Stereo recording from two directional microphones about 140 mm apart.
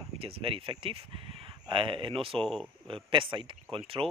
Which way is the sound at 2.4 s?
5° left (ahead or behind).